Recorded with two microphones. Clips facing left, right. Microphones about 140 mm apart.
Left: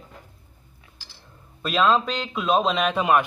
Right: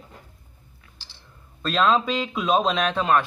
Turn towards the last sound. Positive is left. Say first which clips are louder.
# left 1 dB
turn(degrees=10)  # may be behind; listen again after turning